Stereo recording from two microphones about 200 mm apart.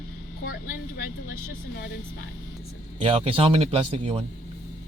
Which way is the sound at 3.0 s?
25° right (ahead or behind).